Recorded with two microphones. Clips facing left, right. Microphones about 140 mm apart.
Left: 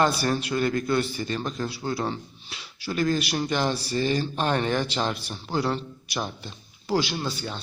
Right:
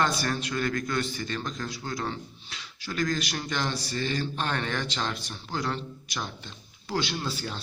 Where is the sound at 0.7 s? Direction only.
30° left (ahead or behind).